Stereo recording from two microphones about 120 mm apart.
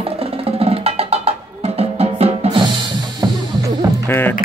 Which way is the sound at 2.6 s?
40° right (ahead or behind).